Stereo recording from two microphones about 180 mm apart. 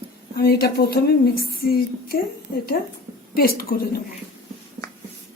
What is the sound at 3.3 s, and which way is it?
Speech, 55° left (ahead or behind).